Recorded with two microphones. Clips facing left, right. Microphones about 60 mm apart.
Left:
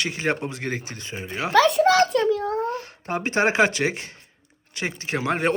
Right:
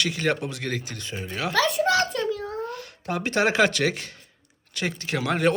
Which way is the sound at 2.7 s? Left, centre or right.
Left.